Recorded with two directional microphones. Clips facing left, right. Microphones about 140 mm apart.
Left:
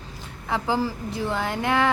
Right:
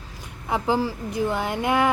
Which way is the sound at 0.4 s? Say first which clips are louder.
Right 2 dB; 15° right (ahead or behind).